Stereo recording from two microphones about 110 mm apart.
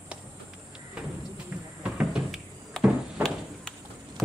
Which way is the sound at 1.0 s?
10° right (ahead or behind).